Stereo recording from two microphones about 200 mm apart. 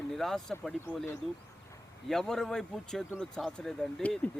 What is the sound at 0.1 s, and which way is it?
Speech, centre (ahead or behind).